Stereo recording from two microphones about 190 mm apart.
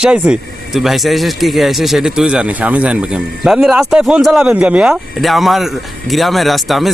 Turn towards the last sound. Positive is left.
turn(degrees=0)  # may be behind; listen again after turning